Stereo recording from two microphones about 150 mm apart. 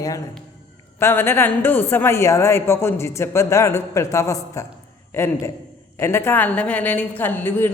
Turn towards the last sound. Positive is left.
turn(degrees=15)  # may be behind; listen again after turning